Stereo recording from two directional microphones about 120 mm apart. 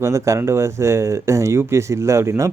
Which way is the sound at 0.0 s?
25° right (ahead or behind).